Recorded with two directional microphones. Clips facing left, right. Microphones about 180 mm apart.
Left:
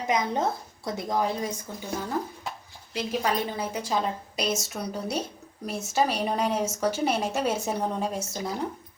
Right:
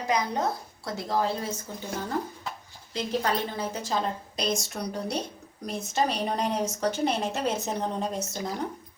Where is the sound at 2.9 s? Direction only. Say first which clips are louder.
Even; 10° left (ahead or behind).